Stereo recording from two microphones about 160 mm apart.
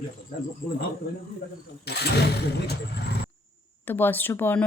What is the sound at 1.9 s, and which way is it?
Speech, 90° left.